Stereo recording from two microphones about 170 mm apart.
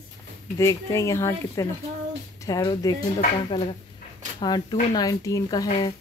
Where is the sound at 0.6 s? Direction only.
15° left (ahead or behind).